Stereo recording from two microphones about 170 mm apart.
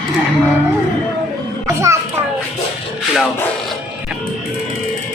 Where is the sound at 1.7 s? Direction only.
15° right (ahead or behind).